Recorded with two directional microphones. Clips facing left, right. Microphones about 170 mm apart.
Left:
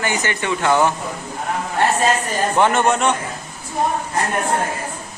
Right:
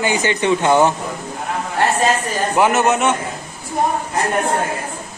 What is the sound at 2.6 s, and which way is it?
Speech, 5° right (ahead or behind).